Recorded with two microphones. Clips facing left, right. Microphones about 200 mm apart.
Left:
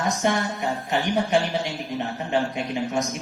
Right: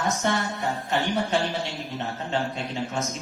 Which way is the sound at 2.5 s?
15° left (ahead or behind).